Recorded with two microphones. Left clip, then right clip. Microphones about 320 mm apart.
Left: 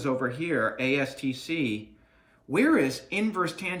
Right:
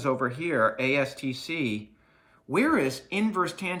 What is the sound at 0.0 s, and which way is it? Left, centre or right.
Speech, centre.